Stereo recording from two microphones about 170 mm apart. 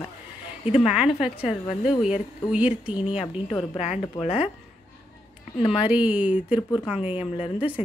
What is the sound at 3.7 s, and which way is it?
Speech, 40° left (ahead or behind).